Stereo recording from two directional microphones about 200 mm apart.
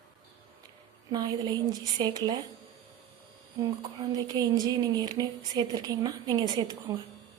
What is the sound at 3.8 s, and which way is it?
A woman's voice, 20° right (ahead or behind).